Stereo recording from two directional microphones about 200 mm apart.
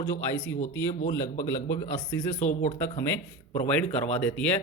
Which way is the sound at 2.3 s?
35° left (ahead or behind).